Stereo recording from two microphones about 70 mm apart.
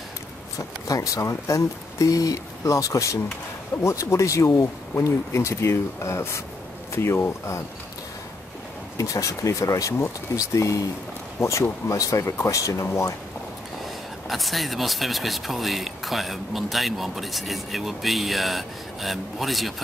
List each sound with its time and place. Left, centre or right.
0.6 s speech: left
8.9 s speech: left
14.3 s speech: centre